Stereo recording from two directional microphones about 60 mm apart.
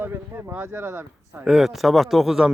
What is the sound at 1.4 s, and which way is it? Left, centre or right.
Speech, centre.